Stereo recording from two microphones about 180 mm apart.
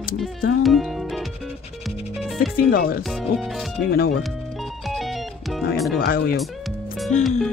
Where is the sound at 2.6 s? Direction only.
55° left (ahead or behind).